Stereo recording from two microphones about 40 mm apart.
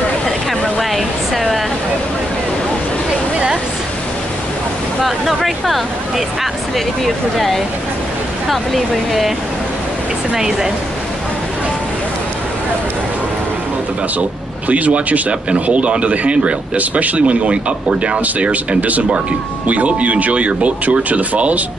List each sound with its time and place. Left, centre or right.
0.7 s a sound: centre
7.3 s speech: centre
10.3 s speech: centre
14.7 s speech: right